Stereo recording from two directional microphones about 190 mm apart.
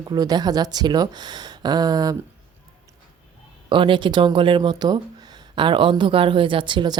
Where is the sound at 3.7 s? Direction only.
25° right (ahead or behind).